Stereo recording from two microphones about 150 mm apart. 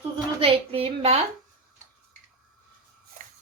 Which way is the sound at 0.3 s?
40° right (ahead or behind).